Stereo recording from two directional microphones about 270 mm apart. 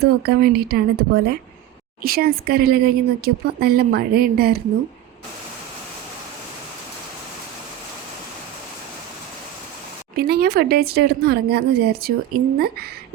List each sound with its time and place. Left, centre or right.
0.0 s speech: right
10.2 s speech: right